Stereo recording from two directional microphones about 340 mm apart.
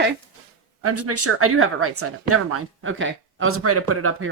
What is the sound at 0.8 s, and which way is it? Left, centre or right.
Speech, right.